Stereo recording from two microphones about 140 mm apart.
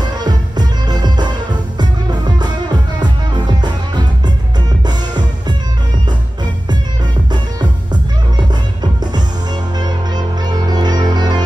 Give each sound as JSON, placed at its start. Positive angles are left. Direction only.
{"t": 0.2, "sound": "music", "side_deg": -30}
{"t": 9.0, "sound": "music", "side_deg": -30}